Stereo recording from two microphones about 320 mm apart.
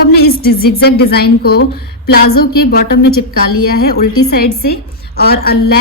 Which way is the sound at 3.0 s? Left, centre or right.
Left.